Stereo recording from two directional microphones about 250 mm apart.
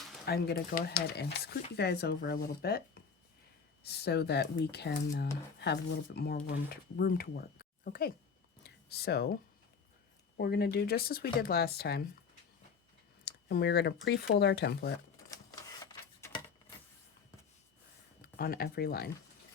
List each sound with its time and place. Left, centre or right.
0.3 s speech: left
3.8 s speech: left
8.6 s a sound: left
10.3 s speech: left
13.2 s speech: left
15.8 s a sound: centre
18.2 s speech: left